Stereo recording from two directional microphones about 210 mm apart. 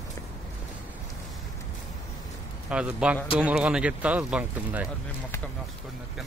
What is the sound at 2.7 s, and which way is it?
A man's voice, 5° right (ahead or behind).